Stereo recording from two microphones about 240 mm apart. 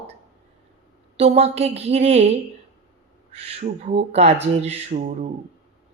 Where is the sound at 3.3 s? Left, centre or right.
Right.